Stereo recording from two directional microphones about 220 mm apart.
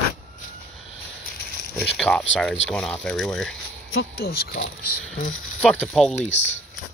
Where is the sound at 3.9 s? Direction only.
50° left (ahead or behind).